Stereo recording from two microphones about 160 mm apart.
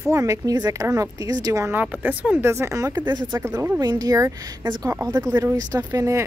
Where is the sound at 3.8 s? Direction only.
25° right (ahead or behind).